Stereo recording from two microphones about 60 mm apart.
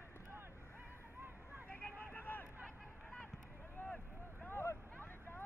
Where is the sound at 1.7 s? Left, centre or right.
Left.